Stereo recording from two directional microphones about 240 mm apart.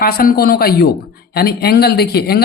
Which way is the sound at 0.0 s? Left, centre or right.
Left.